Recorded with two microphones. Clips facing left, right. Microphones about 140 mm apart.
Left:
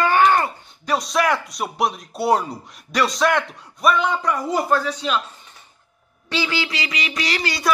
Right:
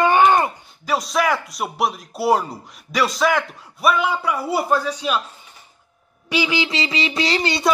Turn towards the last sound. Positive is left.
turn(degrees=-25)  # may be behind; listen again after turning